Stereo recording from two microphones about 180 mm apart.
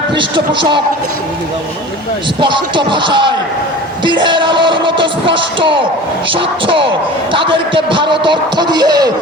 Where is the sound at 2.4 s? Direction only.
25° right (ahead or behind).